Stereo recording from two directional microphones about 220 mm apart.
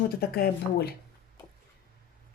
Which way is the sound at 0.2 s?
45° left (ahead or behind).